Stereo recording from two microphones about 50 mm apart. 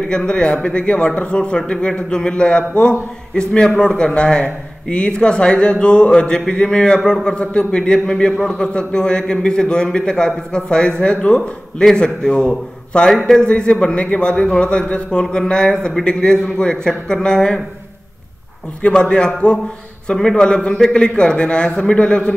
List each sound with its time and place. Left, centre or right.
0.1 s a man's voice: centre
18.8 s a man's voice: left